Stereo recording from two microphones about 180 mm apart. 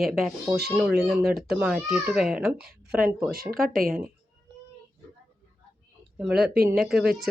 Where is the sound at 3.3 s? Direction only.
55° right (ahead or behind).